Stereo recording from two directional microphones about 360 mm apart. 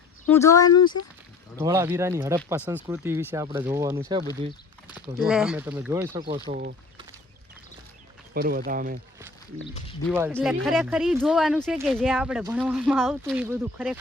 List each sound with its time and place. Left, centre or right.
0.3 s speech: centre
1.5 s speech: centre
5.1 s speech: centre
6.4 s speech: right
8.3 s speech: right
10.1 s speech: centre